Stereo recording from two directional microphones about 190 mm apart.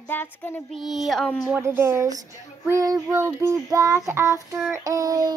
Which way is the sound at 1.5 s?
10° right (ahead or behind).